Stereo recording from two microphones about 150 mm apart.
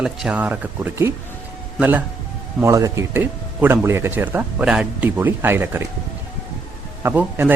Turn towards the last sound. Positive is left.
turn(degrees=-10)  # may be behind; listen again after turning